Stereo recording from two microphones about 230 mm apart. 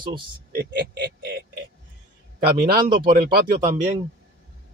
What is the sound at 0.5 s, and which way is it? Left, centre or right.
Speech, right.